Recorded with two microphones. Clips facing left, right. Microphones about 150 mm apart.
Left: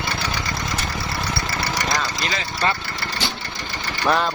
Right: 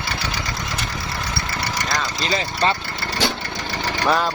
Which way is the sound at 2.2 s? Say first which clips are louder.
Right 3 dB; 30° right (ahead or behind).